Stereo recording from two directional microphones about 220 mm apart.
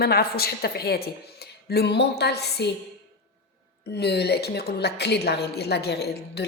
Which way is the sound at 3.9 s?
50° left (ahead or behind).